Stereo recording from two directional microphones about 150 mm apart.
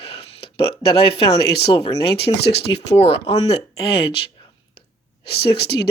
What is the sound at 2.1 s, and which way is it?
Speech, 90° left.